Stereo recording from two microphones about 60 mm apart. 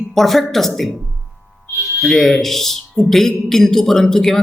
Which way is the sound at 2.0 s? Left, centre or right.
Centre.